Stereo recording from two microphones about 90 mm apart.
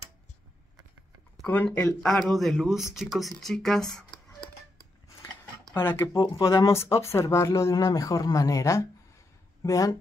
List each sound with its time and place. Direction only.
1.5 s speech: 20° left (ahead or behind)
2.0 s speech: 5° left (ahead or behind)
5.8 s speech: 25° left (ahead or behind)
6.1 s speech: 65° left (ahead or behind)
6.4 s speech: 35° left (ahead or behind)